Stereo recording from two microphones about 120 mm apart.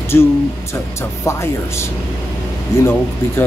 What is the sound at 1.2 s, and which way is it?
Speech, 20° left (ahead or behind).